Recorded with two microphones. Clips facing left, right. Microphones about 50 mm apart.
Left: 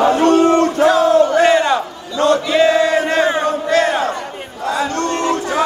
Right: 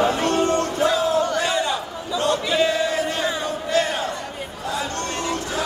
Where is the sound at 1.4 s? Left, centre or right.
Left.